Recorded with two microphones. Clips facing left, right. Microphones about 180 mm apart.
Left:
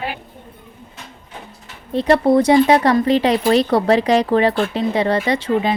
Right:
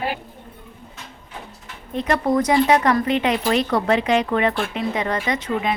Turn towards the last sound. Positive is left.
turn(degrees=30)  # may be behind; listen again after turning